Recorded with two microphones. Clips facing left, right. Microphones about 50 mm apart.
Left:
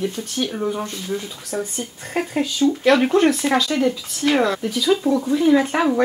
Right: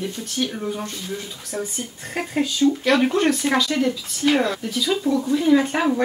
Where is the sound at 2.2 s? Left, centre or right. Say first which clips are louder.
Left 1 dB; centre.